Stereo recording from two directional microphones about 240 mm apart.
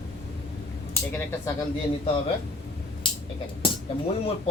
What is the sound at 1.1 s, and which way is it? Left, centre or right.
Speech, centre.